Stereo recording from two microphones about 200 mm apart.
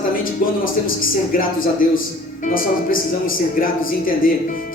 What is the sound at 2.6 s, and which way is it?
Speech, 45° left (ahead or behind).